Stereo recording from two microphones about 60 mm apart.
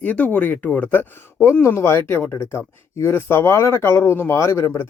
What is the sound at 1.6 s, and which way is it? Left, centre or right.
Speech, left.